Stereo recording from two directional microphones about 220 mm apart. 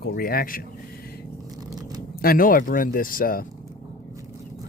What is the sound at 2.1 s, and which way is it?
Speech, 40° left (ahead or behind).